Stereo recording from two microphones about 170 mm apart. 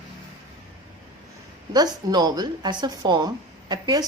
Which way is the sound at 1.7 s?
25° right (ahead or behind).